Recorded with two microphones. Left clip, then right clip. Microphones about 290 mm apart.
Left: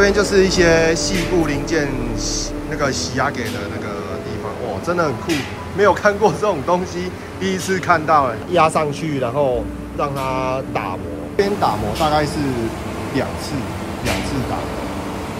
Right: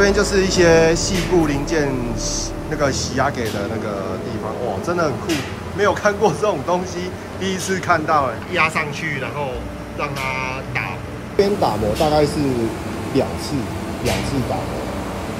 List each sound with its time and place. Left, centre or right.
0.0 s speech: centre
4.8 s speech: centre
8.5 s speech: centre
9.9 s speech: centre
11.6 s speech: left
12.1 s speech: centre